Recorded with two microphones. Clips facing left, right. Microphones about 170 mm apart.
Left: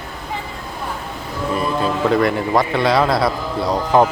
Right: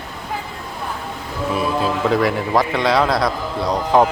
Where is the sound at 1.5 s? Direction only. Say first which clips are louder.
Even; centre (ahead or behind).